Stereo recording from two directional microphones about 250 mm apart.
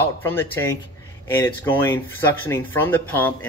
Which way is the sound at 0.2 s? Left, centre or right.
Centre.